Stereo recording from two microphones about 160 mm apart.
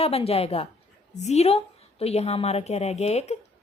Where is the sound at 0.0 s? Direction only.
40° left (ahead or behind).